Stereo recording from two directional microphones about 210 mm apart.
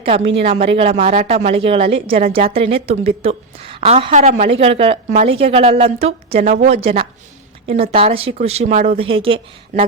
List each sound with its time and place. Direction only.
0.4 s a woman's voice: 30° right (ahead or behind)